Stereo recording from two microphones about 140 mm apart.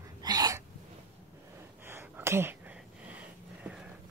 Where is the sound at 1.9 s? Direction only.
15° right (ahead or behind).